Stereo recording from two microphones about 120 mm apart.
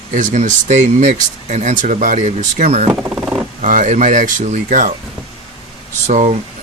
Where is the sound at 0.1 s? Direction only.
90° right; by 2.9 s 65° right (ahead or behind).